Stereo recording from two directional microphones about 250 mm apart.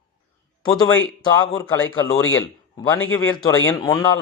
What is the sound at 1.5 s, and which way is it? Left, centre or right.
A man's voice, centre.